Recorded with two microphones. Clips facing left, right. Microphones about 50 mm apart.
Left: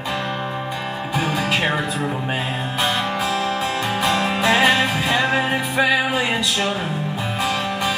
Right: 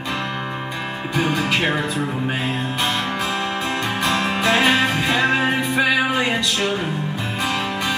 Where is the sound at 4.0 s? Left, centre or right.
Centre.